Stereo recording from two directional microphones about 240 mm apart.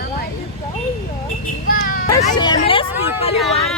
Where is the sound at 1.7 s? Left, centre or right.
Left.